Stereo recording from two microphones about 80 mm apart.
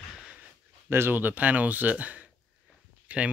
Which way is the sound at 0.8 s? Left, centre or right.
Right.